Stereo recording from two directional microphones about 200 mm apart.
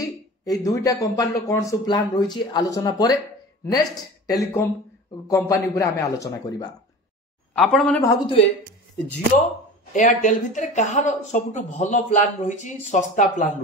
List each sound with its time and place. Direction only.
0.0 s speech: 15° left (ahead or behind)
4.3 s speech: 15° left (ahead or behind)
7.5 s speech: centre (ahead or behind)
8.0 s speech: 15° left (ahead or behind)
9.9 s speech: 40° left (ahead or behind)